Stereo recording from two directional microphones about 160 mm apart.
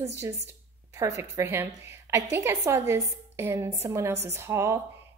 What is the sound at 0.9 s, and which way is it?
Speech, 20° right (ahead or behind).